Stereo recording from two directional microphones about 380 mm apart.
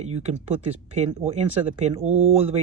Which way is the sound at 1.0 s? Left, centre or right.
Centre.